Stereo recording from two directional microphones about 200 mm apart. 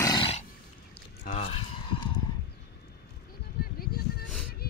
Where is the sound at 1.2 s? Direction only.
30° left (ahead or behind).